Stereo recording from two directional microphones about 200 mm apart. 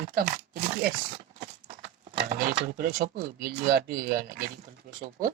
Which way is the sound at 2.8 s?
45° right (ahead or behind).